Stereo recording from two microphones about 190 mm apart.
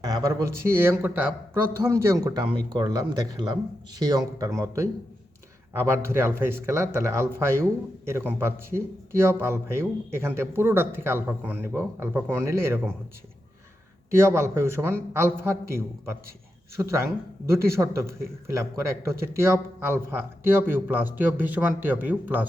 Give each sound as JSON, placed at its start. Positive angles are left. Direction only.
{"t": 0.0, "sound": "a man's voice", "side_deg": -20}
{"t": 14.1, "sound": "a man's voice", "side_deg": -15}
{"t": 16.8, "sound": "a man's voice", "side_deg": -15}